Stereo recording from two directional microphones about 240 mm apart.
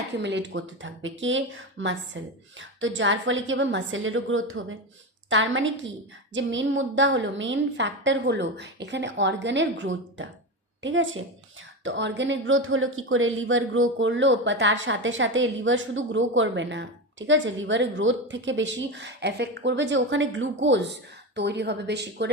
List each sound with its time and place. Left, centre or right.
0.2 s speech: right